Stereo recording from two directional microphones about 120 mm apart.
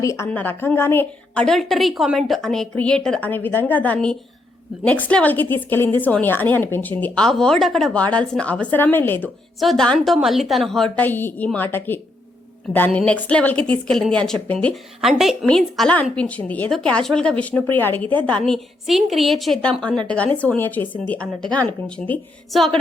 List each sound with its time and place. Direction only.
0.0 s speech: 25° left (ahead or behind)
0.3 s a woman's voice: 15° left (ahead or behind)
1.3 s a woman's voice: 5° left (ahead or behind)
7.3 s a woman's voice: 5° left (ahead or behind)
9.6 s a woman's voice: centre (ahead or behind)
15.0 s a woman's voice: centre (ahead or behind)
20.1 s a woman's voice: 10° left (ahead or behind)